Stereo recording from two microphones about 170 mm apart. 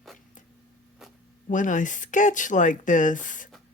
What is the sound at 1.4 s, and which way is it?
Speech, 50° left (ahead or behind).